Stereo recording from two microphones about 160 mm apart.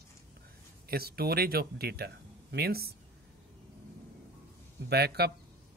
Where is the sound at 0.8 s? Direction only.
75° right (ahead or behind).